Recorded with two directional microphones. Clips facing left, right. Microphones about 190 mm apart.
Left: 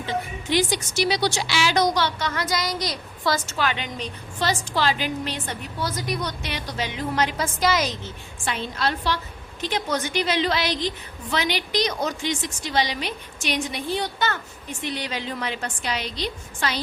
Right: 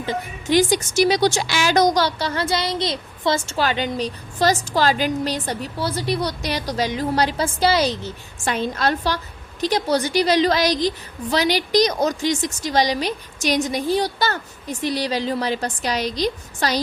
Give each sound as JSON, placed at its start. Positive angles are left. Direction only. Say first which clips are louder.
{"t": 0.0, "sound": "a woman's voice", "louder": "right 2 dB", "side_deg": -45}